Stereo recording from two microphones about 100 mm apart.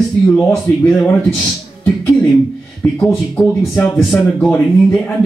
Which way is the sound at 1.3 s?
15° left (ahead or behind).